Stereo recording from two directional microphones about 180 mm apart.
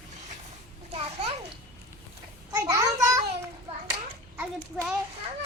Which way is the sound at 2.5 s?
20° right (ahead or behind).